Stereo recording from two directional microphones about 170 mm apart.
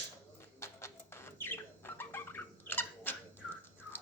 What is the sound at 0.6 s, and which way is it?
Bird, 15° left (ahead or behind).